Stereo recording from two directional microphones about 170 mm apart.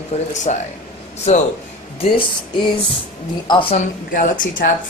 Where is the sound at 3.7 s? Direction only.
55° left (ahead or behind).